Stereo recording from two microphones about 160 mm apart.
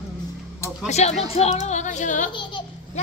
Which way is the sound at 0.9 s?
45° left (ahead or behind).